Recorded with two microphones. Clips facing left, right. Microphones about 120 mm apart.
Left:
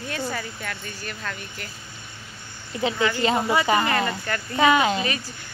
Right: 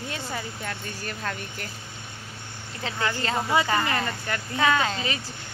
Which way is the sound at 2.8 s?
15° left (ahead or behind).